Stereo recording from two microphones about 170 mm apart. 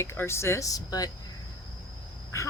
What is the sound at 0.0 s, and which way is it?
Speech, 15° left (ahead or behind).